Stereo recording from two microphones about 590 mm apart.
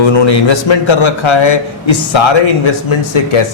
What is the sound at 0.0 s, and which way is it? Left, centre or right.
A man's voice, left.